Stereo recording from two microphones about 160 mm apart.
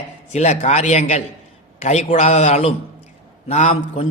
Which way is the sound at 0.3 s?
45° left (ahead or behind).